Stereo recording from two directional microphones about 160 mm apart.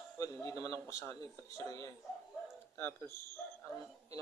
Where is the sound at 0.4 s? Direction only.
20° left (ahead or behind).